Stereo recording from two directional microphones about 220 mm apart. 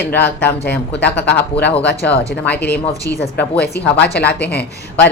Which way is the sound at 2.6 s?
45° left (ahead or behind).